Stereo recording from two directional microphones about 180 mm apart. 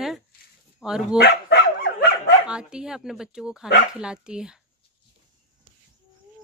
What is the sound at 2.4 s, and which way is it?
A woman's voice, 5° right (ahead or behind).